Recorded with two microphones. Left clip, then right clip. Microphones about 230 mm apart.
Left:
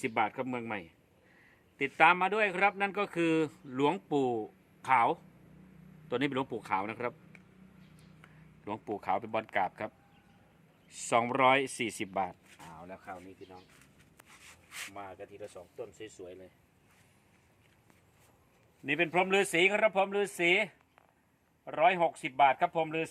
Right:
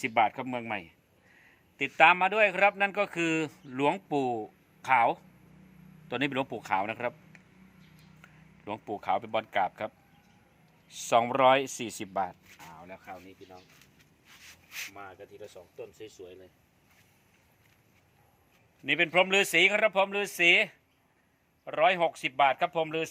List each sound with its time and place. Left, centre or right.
0.0 s speech: centre
8.2 s speech: centre
14.7 s speech: left
18.9 s speech: centre